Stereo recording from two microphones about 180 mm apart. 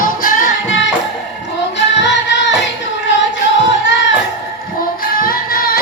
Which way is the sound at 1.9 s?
80° left.